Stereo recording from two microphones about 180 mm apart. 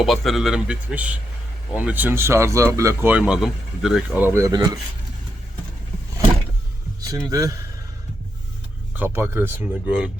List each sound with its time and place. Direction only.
0.0 s a man's voice: centre (ahead or behind); by 4.8 s 20° right (ahead or behind)
7.3 s speech: 20° right (ahead or behind)
9.0 s speech: 15° right (ahead or behind)